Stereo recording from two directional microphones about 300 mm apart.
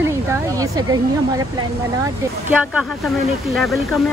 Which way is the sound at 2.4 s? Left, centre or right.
Centre.